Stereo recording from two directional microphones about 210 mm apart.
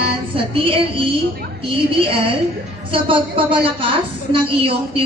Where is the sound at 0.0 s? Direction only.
25° right (ahead or behind).